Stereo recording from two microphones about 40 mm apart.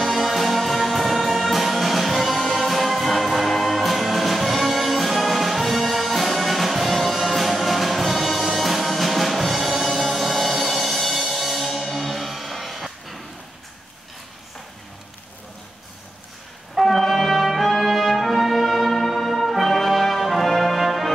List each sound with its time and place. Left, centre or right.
0.0 s music: centre
16.8 s music: centre